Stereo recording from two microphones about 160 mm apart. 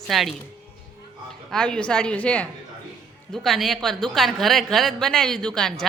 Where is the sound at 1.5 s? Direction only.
5° left (ahead or behind).